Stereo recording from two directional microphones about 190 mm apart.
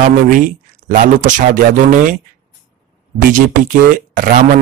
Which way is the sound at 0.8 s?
40° right (ahead or behind).